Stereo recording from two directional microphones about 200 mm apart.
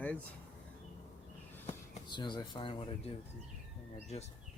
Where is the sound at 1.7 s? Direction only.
25° left (ahead or behind).